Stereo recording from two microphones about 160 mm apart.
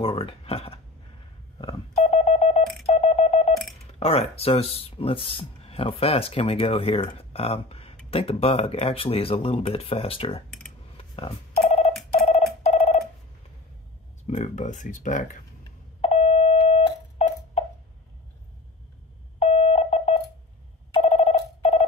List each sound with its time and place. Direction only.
0.0 s speech: 35° left (ahead or behind)
1.6 s telephone dialing: 40° left (ahead or behind)
4.0 s speech: 40° left (ahead or behind)
11.0 s telephone: 35° left (ahead or behind)
12.6 s telephone bell ringing: 40° left (ahead or behind)
14.2 s speech: 45° left (ahead or behind)
16.0 s a sound: 40° left (ahead or behind)
19.4 s busy signal: 40° left (ahead or behind)
21.0 s telephone bell ringing: 45° left (ahead or behind)